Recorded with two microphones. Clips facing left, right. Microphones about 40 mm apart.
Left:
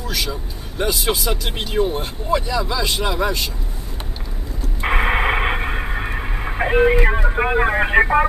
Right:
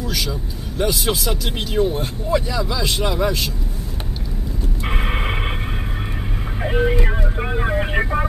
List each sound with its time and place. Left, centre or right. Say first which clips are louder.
0.1 s speech: even; centre
2.4 s speech: left 1 dB; centre
4.8 s radio: left 7 dB; left
6.6 s speech: left 5 dB; left